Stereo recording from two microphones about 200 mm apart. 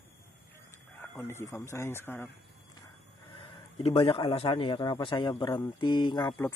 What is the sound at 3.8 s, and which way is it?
A man's voice, 25° left (ahead or behind).